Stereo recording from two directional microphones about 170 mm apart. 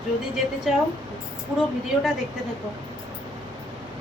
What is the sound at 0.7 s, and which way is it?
Speech, centre (ahead or behind).